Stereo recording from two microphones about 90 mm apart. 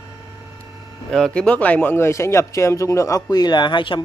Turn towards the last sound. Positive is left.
turn(degrees=65)  # may be behind; listen again after turning